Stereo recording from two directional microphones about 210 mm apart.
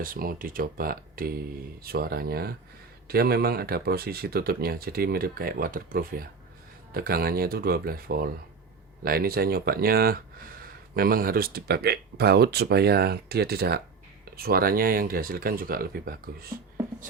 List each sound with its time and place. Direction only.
0.0 s speech: 45° right (ahead or behind)